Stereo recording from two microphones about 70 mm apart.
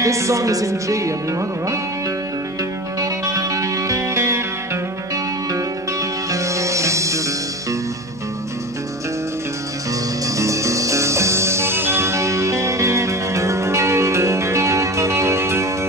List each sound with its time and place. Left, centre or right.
0.0 s speech: right
3.0 s music: right
6.3 s music: right
10.2 s music: right